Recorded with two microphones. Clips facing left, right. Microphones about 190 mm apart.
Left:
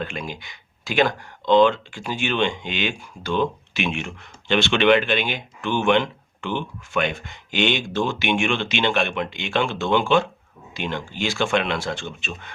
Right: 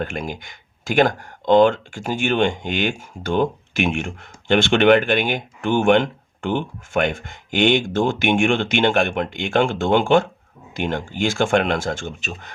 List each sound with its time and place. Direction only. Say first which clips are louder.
0.0 s speech: right 4 dB; 50° right (ahead or behind)